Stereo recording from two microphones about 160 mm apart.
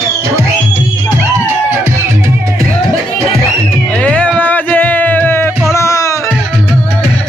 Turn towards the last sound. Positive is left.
turn(degrees=20)  # may be behind; listen again after turning